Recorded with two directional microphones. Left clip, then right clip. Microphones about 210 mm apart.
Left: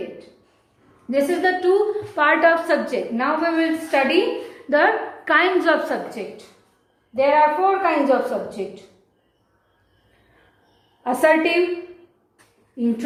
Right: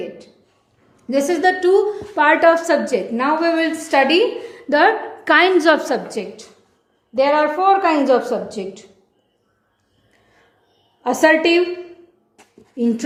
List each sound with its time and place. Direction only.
1.1 s a woman's voice: 50° right (ahead or behind)
11.0 s a woman's voice: 50° right (ahead or behind)
12.8 s a woman's voice: 50° right (ahead or behind)